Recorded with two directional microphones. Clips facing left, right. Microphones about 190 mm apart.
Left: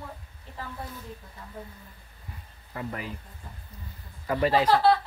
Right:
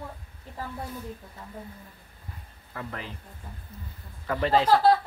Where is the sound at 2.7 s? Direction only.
10° left (ahead or behind).